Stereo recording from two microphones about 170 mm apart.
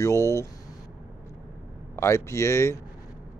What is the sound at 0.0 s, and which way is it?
Speech, 15° left (ahead or behind).